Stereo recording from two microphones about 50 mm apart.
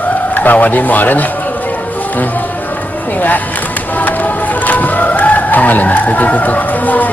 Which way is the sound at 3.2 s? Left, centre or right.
Left.